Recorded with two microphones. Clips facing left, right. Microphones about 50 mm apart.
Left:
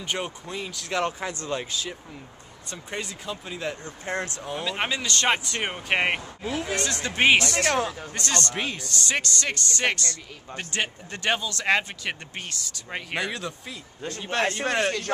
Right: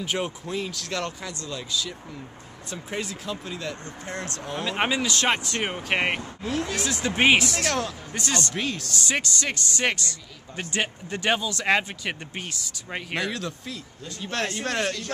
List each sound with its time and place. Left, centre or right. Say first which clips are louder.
0.0 s speech: right 2 dB; centre
1.4 s speech: right 2 dB; left
2.6 s speech: right 2 dB; centre
3.6 s speech: left 2 dB; left
4.4 s speech: right 1 dB; centre
4.6 s speech: right 3 dB; centre
7.6 s speech: left 2 dB; centre
8.1 s speech: even; centre
8.5 s speech: right 1 dB; centre
8.9 s speech: left 2 dB; centre